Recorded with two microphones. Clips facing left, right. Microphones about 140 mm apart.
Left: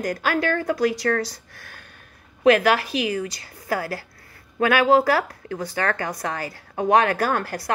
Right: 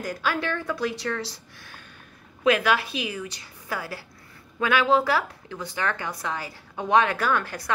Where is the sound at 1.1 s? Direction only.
45° left (ahead or behind).